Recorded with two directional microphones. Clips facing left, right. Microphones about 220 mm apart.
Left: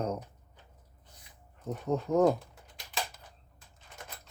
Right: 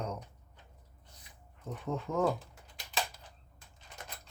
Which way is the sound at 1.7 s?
40° left (ahead or behind).